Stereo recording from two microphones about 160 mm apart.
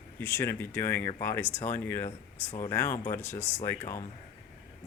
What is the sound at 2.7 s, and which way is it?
Speech, 15° left (ahead or behind).